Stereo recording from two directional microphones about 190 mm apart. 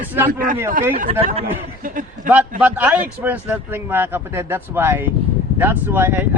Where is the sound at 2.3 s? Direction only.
10° right (ahead or behind).